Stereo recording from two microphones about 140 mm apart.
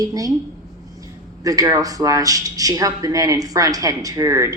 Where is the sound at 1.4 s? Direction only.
25° right (ahead or behind).